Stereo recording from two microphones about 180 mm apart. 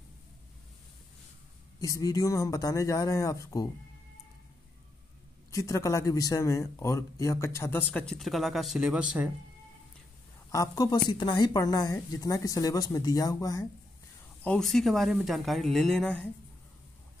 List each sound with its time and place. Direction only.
1.8 s a woman's voice: 20° left (ahead or behind)
5.5 s speech: 15° left (ahead or behind); by 9.3 s 5° right (ahead or behind)
10.5 s a woman's voice: 20° left (ahead or behind)
14.4 s speech: 5° left (ahead or behind)